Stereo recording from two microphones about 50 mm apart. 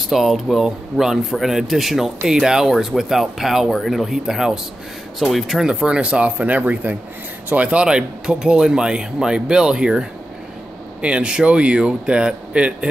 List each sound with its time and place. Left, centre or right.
0.1 s speech: centre
5.7 s speech: centre
7.8 s speech: centre